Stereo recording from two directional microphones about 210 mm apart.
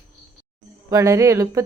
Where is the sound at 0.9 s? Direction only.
15° right (ahead or behind).